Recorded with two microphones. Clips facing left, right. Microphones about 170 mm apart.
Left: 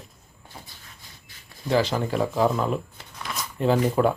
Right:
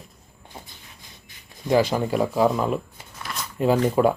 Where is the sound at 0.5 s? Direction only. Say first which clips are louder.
Right 3 dB; 25° right (ahead or behind).